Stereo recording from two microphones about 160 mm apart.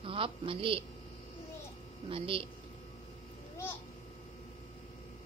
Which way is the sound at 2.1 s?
35° right (ahead or behind).